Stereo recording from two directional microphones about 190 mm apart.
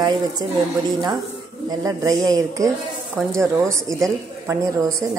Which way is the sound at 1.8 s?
20° right (ahead or behind).